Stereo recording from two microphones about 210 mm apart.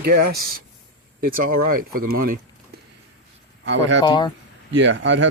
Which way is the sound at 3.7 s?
60° right (ahead or behind).